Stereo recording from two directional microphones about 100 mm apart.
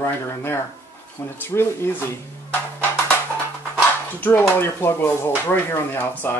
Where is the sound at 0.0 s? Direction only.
25° left (ahead or behind).